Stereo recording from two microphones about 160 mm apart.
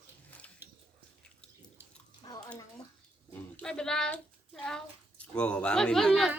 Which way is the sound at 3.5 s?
5° left (ahead or behind).